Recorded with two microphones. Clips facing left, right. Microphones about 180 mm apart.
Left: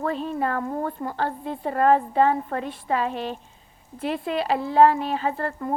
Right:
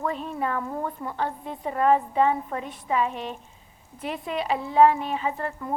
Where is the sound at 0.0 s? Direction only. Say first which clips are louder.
Left 3 dB; 30° left (ahead or behind).